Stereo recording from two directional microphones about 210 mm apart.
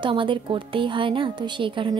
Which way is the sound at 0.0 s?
25° right (ahead or behind).